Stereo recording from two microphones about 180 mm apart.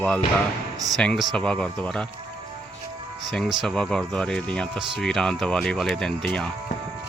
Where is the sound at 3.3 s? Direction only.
Centre (ahead or behind).